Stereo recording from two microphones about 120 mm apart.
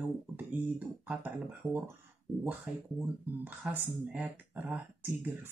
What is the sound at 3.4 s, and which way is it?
Speech, 20° right (ahead or behind).